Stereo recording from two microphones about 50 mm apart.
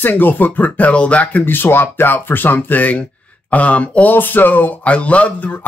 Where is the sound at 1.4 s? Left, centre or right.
Left.